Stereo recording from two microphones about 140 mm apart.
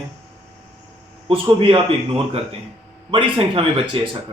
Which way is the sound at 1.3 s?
40° right (ahead or behind).